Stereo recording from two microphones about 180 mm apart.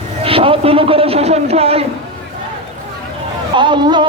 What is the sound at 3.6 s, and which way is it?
Speech, 25° right (ahead or behind).